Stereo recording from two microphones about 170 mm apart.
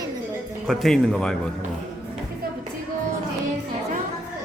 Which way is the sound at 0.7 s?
Centre (ahead or behind).